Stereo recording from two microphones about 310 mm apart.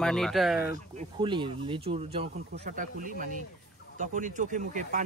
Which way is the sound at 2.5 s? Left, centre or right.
Right.